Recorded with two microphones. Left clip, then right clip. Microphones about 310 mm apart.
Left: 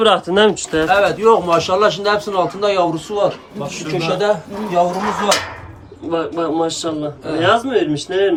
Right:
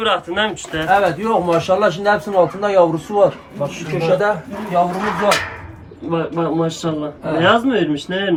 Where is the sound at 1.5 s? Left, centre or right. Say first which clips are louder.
Left 1 dB; centre.